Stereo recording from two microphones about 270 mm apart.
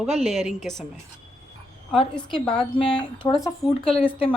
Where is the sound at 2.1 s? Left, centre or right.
Centre.